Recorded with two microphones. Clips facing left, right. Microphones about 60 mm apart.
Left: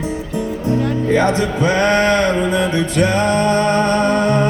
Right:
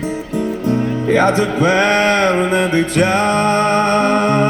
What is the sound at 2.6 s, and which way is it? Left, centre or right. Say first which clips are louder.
Music: right 2 dB; right.